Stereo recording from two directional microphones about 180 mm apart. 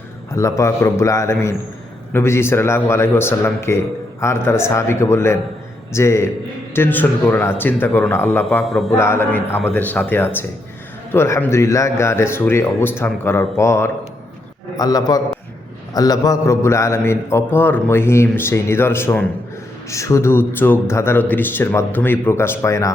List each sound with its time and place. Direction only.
0.3 s a man's voice: 15° left (ahead or behind)
8.4 s speech: centre (ahead or behind)
8.9 s a man's voice: 15° left (ahead or behind)